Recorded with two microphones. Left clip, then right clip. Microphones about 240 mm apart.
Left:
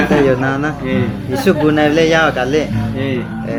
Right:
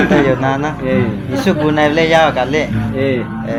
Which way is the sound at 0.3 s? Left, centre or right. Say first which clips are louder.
Even; left.